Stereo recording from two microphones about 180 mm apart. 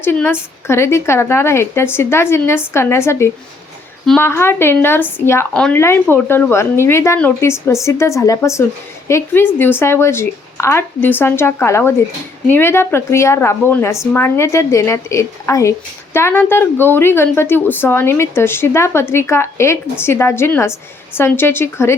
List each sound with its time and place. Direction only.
0.0 s a woman's voice: 10° left (ahead or behind)